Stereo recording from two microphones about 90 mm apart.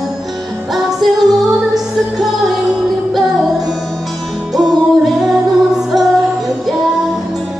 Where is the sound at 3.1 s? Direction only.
Centre (ahead or behind).